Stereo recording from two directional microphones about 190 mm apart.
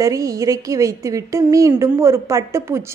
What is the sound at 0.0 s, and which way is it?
A woman's voice, 20° right (ahead or behind).